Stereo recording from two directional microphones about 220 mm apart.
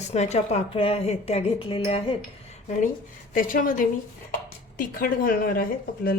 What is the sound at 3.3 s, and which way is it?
Speech, 40° left (ahead or behind).